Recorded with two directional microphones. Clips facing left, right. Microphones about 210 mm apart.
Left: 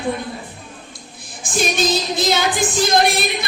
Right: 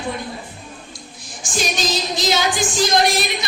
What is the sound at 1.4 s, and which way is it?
Music, 55° left (ahead or behind).